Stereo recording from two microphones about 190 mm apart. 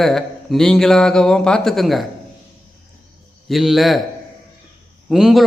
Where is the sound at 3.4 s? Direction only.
Centre (ahead or behind).